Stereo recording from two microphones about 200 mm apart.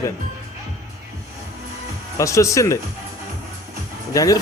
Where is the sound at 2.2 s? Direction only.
15° left (ahead or behind).